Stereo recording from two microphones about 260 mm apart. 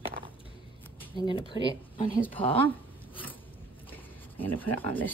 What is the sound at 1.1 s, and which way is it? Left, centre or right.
Speech, centre.